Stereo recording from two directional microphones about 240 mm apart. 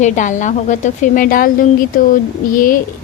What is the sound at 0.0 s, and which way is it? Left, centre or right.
Speech, left.